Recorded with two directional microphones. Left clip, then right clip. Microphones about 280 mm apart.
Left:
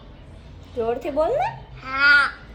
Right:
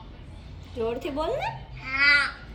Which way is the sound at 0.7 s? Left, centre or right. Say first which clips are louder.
Left 5 dB; centre.